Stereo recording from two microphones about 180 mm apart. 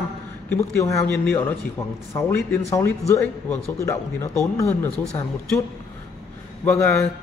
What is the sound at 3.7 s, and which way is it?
A man's voice, 15° left (ahead or behind).